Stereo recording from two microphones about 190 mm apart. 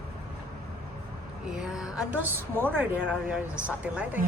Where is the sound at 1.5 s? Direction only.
5° right (ahead or behind).